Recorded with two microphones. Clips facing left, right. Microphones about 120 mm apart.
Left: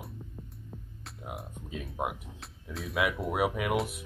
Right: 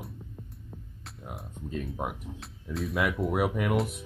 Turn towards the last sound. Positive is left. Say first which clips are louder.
# right 2 dB
turn(degrees=0)  # may be behind; listen again after turning